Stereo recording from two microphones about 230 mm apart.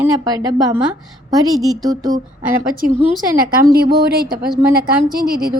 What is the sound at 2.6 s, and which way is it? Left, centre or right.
A woman's voice, right.